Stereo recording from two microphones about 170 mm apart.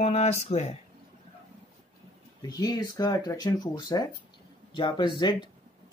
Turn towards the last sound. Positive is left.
turn(degrees=25)  # may be behind; listen again after turning